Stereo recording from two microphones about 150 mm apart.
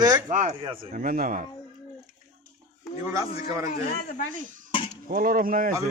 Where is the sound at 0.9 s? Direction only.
75° right (ahead or behind).